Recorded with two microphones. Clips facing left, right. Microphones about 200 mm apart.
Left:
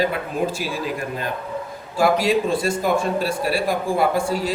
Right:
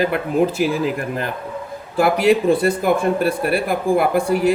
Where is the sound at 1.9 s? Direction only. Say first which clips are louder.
Right 3 dB; 60° right (ahead or behind).